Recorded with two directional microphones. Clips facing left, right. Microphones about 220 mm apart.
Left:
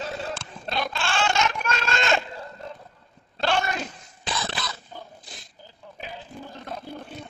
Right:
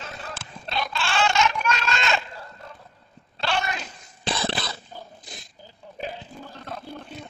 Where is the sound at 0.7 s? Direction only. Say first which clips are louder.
Left 1 dB; 50° left (ahead or behind).